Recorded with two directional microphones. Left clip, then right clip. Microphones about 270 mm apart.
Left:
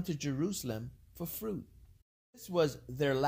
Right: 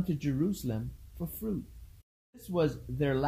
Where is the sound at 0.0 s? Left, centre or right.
Left.